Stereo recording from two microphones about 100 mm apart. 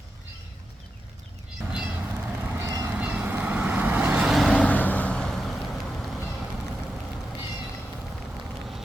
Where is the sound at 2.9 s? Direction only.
15° right (ahead or behind).